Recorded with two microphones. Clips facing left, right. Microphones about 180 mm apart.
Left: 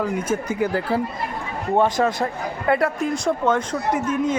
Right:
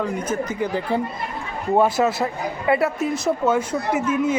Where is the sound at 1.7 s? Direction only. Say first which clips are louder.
Right 1 dB; 10° right (ahead or behind).